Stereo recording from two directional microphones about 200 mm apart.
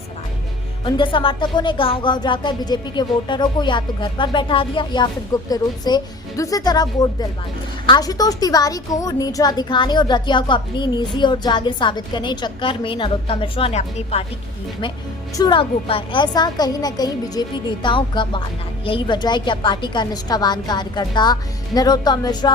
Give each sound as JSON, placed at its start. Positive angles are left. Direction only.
{"t": 0.9, "sound": "a woman's voice", "side_deg": 25}
{"t": 15.4, "sound": "a woman's voice", "side_deg": 25}